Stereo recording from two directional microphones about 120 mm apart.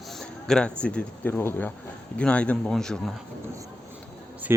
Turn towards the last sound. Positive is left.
turn(degrees=-20)  # may be behind; listen again after turning